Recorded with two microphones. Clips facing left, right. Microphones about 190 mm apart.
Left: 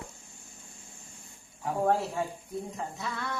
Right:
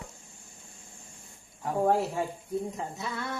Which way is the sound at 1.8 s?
15° right (ahead or behind).